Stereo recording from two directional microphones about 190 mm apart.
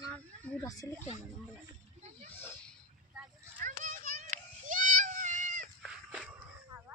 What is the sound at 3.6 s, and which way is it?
Child singing, 45° right (ahead or behind).